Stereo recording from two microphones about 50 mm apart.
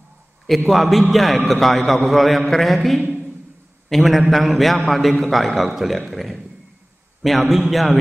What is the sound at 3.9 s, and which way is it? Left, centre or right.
A man's voice, centre.